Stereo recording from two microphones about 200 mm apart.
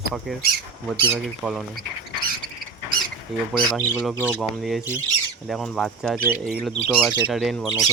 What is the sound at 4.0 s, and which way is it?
Speech, 5° right (ahead or behind).